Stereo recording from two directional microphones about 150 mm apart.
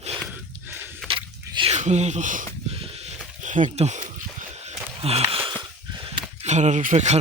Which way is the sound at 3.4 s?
55° right (ahead or behind).